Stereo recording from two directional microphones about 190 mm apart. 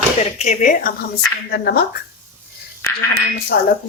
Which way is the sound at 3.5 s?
55° left (ahead or behind).